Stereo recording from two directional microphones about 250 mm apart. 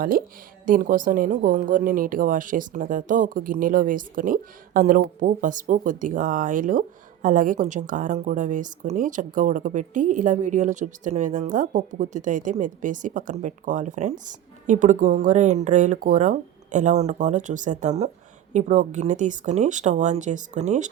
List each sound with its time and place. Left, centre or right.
0.0 s a woman's voice: right